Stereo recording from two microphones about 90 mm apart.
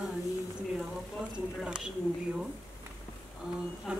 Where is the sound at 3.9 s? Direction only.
10° right (ahead or behind).